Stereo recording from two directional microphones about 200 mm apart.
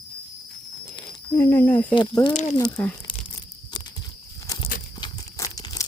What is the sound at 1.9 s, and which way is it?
Speech, 25° left (ahead or behind).